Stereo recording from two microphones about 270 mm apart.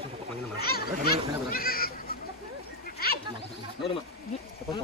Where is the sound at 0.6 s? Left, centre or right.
Left.